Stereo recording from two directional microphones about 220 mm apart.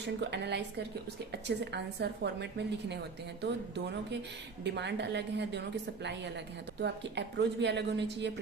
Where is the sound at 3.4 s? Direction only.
50° right (ahead or behind).